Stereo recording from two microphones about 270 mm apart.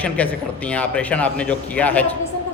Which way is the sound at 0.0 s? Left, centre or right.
Centre.